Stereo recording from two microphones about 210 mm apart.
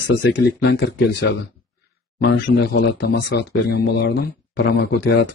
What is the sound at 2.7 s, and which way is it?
Speech, 50° left (ahead or behind).